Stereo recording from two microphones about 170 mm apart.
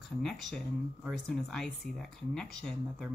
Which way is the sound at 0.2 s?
Centre (ahead or behind).